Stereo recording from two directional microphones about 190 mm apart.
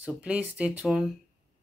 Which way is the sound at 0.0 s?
5° right (ahead or behind).